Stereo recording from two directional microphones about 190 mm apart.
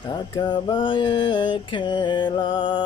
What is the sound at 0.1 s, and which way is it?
Mantra, 25° left (ahead or behind).